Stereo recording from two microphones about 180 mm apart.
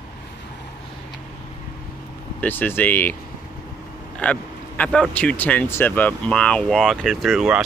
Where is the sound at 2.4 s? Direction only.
10° left (ahead or behind).